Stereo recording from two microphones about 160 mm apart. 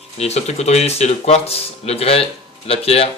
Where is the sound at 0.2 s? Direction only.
40° left (ahead or behind).